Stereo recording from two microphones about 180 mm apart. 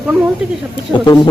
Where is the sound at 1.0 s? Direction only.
25° left (ahead or behind).